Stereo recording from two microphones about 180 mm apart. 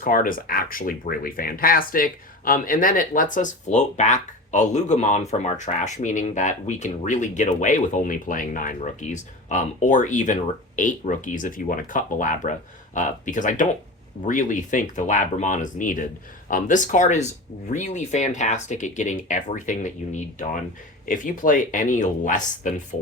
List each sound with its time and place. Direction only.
0.0 s speech: 50° left (ahead or behind)